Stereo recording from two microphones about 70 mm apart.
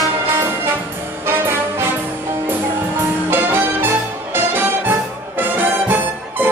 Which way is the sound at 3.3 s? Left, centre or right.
Right.